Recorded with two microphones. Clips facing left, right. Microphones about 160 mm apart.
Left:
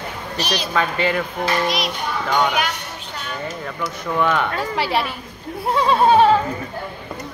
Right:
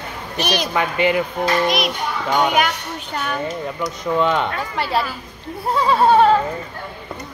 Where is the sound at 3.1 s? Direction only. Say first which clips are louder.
Right 7 dB; 60° right (ahead or behind).